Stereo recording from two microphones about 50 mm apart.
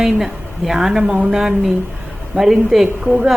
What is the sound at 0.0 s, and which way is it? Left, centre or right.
A woman's voice, centre.